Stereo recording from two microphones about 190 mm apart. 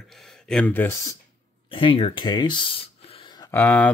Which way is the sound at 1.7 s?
30° left (ahead or behind).